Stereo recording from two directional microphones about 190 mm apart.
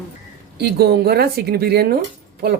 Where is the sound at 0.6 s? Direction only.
60° right (ahead or behind).